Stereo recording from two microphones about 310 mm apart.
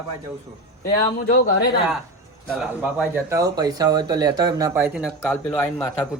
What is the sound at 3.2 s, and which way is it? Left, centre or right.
Speech, centre.